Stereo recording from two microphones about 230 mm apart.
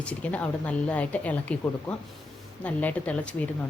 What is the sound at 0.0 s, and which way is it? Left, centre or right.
A woman's voice, centre.